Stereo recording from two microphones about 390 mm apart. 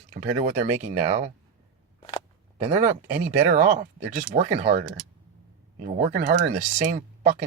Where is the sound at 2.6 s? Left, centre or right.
Centre.